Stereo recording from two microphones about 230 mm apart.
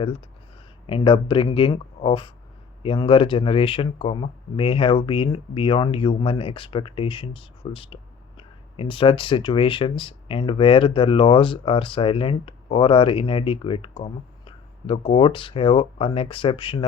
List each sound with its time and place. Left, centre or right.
0.9 s speech: left